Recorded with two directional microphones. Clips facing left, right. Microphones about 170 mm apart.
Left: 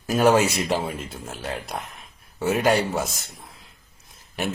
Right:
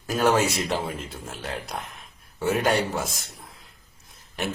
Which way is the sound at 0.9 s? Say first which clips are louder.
Left 2 dB; centre (ahead or behind).